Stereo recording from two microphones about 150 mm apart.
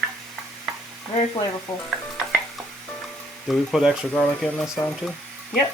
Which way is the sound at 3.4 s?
Centre (ahead or behind).